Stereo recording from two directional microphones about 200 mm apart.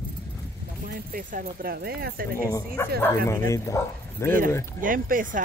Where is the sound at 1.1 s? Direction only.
45° right (ahead or behind).